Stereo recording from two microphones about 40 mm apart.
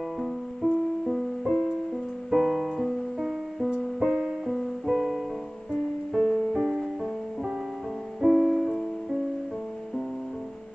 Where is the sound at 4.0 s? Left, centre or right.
Centre.